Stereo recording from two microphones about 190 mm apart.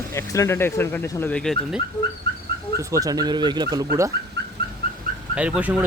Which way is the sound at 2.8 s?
15° right (ahead or behind).